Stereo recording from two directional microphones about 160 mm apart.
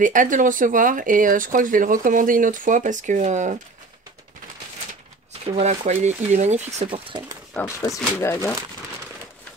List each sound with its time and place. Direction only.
0.0 s speech: 55° right (ahead or behind)
5.4 s speech: 40° right (ahead or behind)
6.9 s speech: 30° right (ahead or behind)
7.5 s speech: 15° left (ahead or behind)